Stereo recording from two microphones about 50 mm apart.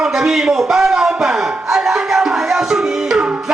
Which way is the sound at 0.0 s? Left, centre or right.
Centre.